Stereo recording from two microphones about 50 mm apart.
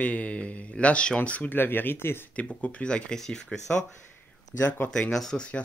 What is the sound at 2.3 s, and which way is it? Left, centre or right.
Speech, left.